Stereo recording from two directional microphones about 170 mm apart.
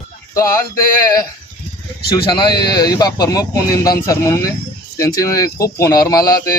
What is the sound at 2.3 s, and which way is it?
Speech, 25° left (ahead or behind).